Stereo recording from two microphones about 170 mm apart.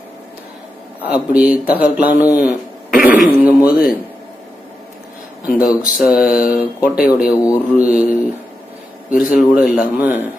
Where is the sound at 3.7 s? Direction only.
60° left (ahead or behind).